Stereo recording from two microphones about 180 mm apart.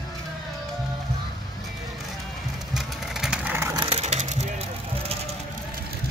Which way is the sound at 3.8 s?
35° right (ahead or behind).